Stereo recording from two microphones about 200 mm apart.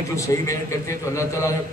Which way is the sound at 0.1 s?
15° left (ahead or behind).